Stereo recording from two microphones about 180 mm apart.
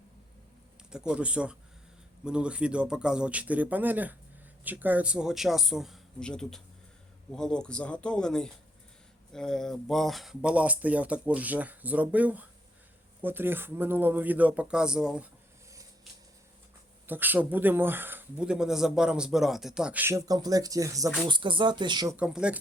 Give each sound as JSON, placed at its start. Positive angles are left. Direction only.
{"t": 0.9, "sound": "speech", "side_deg": -5}
{"t": 17.1, "sound": "speech", "side_deg": -10}
{"t": 22.1, "sound": "speech", "side_deg": -5}